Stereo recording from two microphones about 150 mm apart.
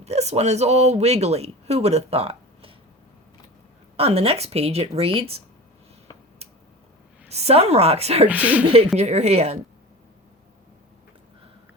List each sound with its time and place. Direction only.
0.0 s speech: 45° right (ahead or behind)
3.9 s speech: 40° right (ahead or behind)
7.3 s speech: 45° right (ahead or behind)
8.3 s speech: 10° right (ahead or behind)
8.6 s a woman's voice: 40° right (ahead or behind)